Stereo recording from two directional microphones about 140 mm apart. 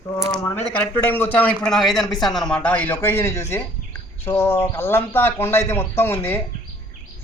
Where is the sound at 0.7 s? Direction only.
15° left (ahead or behind).